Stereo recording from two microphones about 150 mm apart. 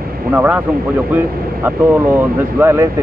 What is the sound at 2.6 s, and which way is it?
Speech, 15° right (ahead or behind).